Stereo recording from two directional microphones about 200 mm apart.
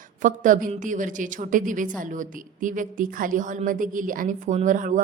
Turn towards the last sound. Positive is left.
turn(degrees=-40)  # may be behind; listen again after turning